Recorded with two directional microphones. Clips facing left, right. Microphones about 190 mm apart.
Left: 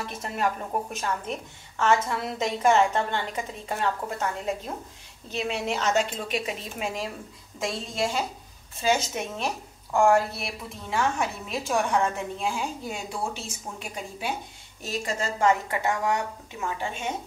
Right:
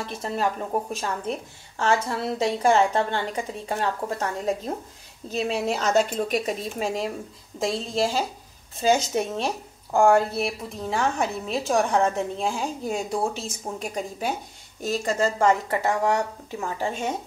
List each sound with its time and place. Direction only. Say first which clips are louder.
0.0 s a woman's voice: right 2 dB; 30° right (ahead or behind)